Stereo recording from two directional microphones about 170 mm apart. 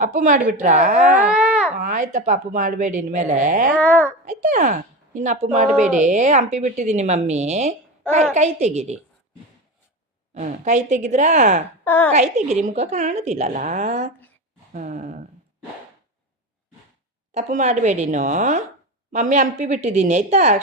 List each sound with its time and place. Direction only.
0.0 s speech: 50° right (ahead or behind)
1.3 s a sound: 5° right (ahead or behind)
1.7 s speech: 50° right (ahead or behind)
3.8 s a child's voice: 10° left (ahead or behind)
4.3 s a woman's voice: 50° right (ahead or behind)
10.3 s speech: 45° right (ahead or behind)
11.9 s a child's voice: 10° left (ahead or behind)
12.1 s a woman's voice: 40° right (ahead or behind)
17.3 s speech: 40° right (ahead or behind)